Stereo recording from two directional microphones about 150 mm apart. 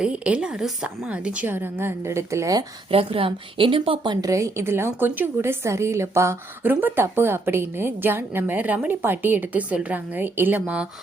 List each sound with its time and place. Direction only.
0.0 s a woman's voice: 5° right (ahead or behind); by 2.6 s 20° right (ahead or behind)
2.9 s a woman's voice: 40° right (ahead or behind); by 10.8 s 10° right (ahead or behind)